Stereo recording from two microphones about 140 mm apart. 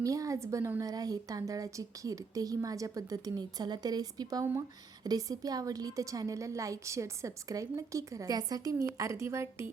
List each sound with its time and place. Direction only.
0.0 s a woman's voice: 25° right (ahead or behind)